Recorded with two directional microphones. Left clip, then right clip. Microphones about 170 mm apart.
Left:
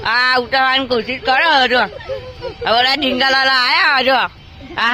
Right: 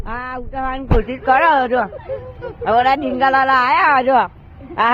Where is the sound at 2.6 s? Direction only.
15° left (ahead or behind).